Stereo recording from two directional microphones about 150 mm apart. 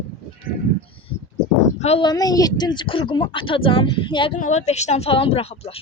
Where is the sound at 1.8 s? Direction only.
45° left (ahead or behind).